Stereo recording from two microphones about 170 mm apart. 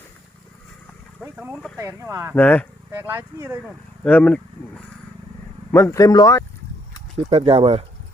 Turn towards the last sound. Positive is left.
turn(degrees=-35)  # may be behind; listen again after turning